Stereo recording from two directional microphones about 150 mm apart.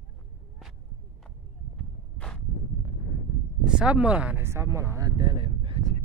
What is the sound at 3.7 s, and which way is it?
Speech, 5° right (ahead or behind).